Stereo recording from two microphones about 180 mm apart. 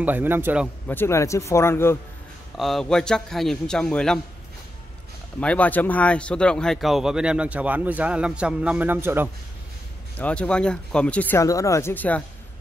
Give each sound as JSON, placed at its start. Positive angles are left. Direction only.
{"t": 0.0, "sound": "a man's voice", "side_deg": -10}
{"t": 0.8, "sound": "speech", "side_deg": 15}
{"t": 2.5, "sound": "speech", "side_deg": 0}
{"t": 5.4, "sound": "speech", "side_deg": 5}
{"t": 10.1, "sound": "speech", "side_deg": 10}